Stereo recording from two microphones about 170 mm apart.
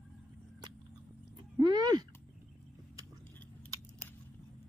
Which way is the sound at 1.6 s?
25° right (ahead or behind).